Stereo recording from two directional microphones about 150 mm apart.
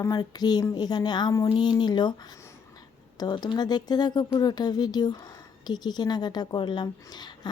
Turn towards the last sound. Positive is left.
turn(degrees=30)  # may be behind; listen again after turning